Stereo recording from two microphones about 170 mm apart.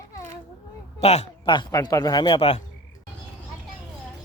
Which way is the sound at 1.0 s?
40° left (ahead or behind).